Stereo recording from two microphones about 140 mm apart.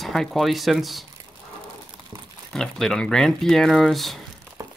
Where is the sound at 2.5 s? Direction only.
5° left (ahead or behind).